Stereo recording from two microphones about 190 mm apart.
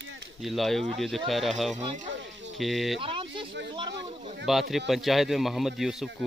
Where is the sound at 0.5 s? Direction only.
Centre (ahead or behind).